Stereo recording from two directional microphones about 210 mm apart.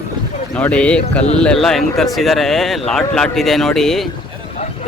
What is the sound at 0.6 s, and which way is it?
Speech, 5° left (ahead or behind).